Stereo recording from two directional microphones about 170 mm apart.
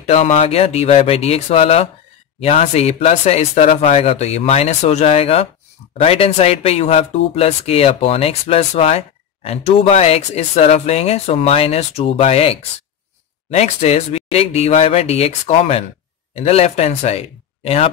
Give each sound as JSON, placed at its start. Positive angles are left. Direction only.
{"t": 0.0, "sound": "speech", "side_deg": 40}